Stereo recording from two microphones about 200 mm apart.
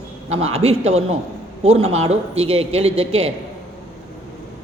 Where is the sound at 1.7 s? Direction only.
90° right.